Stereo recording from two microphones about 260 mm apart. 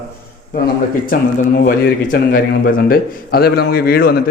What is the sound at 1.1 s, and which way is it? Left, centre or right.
A man's voice, left.